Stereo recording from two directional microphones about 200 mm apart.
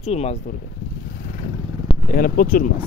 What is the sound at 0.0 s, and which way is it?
Speech, 30° left (ahead or behind).